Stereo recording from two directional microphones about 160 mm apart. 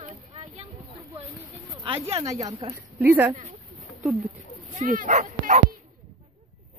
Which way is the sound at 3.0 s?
15° right (ahead or behind).